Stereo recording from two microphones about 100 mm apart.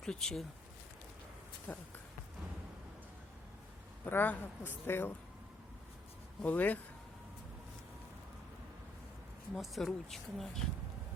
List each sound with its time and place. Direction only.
0.0 s speech: 5° left (ahead or behind)
1.7 s speech: 15° left (ahead or behind)
4.0 s speech: 15° left (ahead or behind)
6.4 s speech: 15° left (ahead or behind)
9.6 s speech: centre (ahead or behind)